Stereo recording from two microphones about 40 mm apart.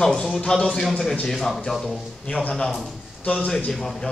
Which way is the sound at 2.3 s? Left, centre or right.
Left.